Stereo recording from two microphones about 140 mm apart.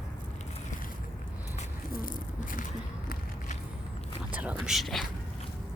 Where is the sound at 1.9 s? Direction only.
75° left (ahead or behind).